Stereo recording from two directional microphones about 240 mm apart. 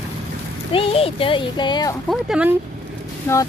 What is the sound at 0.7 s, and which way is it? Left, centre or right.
Speech, left.